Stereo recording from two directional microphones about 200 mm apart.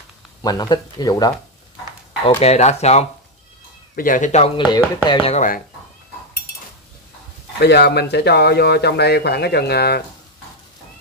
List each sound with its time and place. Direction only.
0.4 s speech: 20° left (ahead or behind)
2.2 s speech: 30° left (ahead or behind)
3.9 s speech: 45° left (ahead or behind)
7.5 s speech: 55° left (ahead or behind)